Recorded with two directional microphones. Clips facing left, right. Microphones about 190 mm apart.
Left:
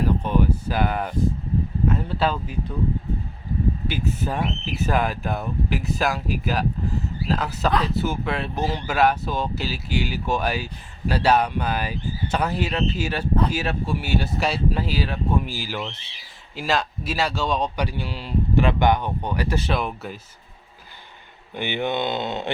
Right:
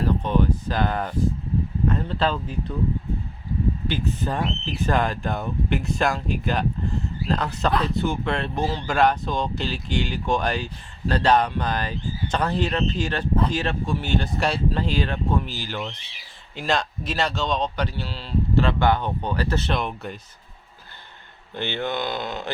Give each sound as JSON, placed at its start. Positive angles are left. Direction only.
{"t": 0.2, "sound": "a sound", "side_deg": 10}
{"t": 1.9, "sound": "speech", "side_deg": 10}
{"t": 3.8, "sound": "speech", "side_deg": 10}
{"t": 21.5, "sound": "speech", "side_deg": 15}